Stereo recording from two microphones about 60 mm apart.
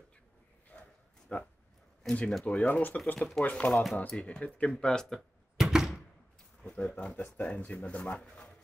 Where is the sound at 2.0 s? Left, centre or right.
Centre.